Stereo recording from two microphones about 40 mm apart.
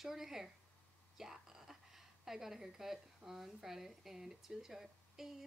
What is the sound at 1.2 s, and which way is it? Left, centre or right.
Whispering, centre.